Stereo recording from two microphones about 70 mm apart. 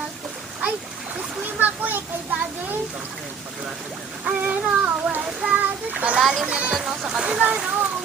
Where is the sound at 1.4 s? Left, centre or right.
Right.